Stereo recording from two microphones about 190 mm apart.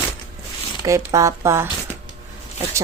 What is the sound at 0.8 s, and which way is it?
Speech, 15° right (ahead or behind).